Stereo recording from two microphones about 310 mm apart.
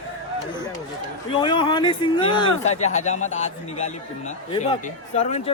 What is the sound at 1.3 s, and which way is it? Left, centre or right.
A man's voice, centre.